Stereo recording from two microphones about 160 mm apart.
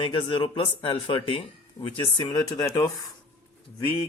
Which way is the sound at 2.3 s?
25° left (ahead or behind).